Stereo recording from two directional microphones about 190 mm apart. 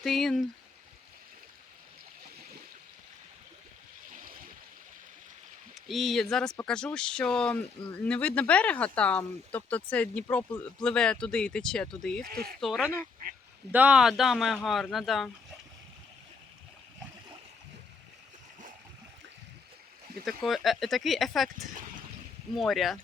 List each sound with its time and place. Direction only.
0.0 s speech: centre (ahead or behind)
4.1 s a sound: 45° right (ahead or behind)
5.7 s speech: centre (ahead or behind)
12.2 s speech: 50° right (ahead or behind)
12.5 s speech: centre (ahead or behind)
13.2 s goose: 50° right (ahead or behind)
13.7 s speech: 5° right (ahead or behind)
20.2 s speech: centre (ahead or behind)
22.5 s speech: centre (ahead or behind)